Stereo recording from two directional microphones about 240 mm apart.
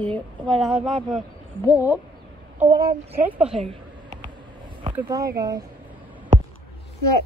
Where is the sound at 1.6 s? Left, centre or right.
Centre.